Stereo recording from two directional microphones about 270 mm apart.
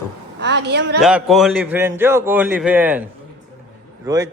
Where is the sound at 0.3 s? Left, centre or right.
Right.